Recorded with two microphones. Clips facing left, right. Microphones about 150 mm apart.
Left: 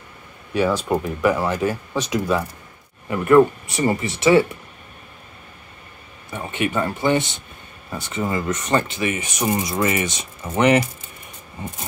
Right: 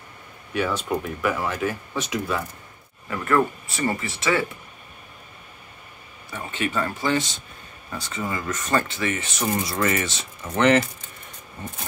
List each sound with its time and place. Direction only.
1.0 s speech: 15° left (ahead or behind)
6.3 s speech: 20° left (ahead or behind)